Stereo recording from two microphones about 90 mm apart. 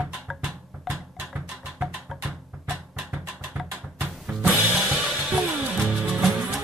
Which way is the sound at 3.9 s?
15° right (ahead or behind).